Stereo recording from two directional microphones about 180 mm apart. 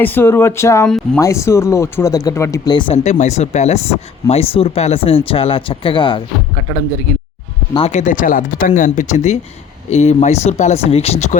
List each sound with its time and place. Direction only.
0.0 s speech: 10° left (ahead or behind)
0.9 s speech: 5° left (ahead or behind)
1.2 s speech: 15° left (ahead or behind)
7.7 s speech: 35° left (ahead or behind)